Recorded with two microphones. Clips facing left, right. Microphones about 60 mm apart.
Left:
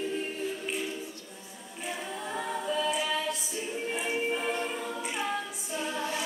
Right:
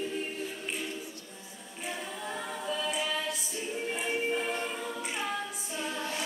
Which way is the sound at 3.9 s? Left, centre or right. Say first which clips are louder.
Left 1 dB; centre.